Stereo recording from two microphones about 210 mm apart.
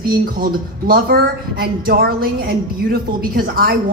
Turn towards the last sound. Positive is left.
turn(degrees=-45)  # may be behind; listen again after turning